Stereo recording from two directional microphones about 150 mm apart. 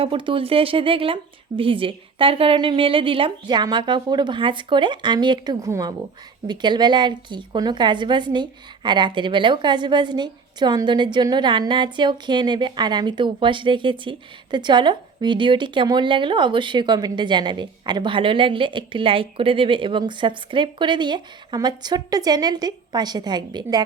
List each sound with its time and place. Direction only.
0.0 s a woman's voice: 35° right (ahead or behind)